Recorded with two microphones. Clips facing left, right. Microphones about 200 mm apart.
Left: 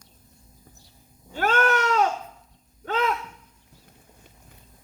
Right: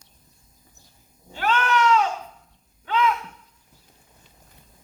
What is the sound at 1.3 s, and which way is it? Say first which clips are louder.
Cat: left 1 dB; 45° left (ahead or behind).